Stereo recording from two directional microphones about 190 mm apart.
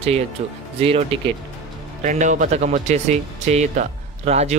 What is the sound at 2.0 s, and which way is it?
Speech, 40° right (ahead or behind).